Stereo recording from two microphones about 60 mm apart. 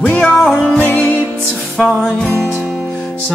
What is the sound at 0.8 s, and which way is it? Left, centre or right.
Music, left.